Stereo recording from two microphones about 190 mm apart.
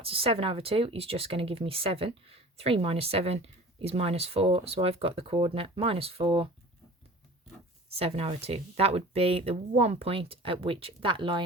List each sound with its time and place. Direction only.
0.0 s speech: 30° right (ahead or behind)
7.9 s speech: 30° right (ahead or behind)